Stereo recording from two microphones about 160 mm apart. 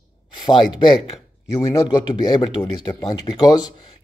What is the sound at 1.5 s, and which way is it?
Speech, 25° left (ahead or behind).